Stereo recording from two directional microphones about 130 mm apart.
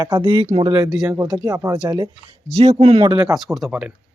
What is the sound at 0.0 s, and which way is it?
Speech, 35° right (ahead or behind).